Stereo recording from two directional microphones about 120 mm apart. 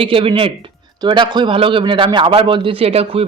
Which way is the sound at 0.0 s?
45° right (ahead or behind).